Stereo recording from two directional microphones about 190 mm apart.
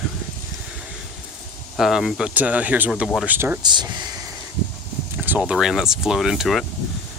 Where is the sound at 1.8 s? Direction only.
Centre (ahead or behind).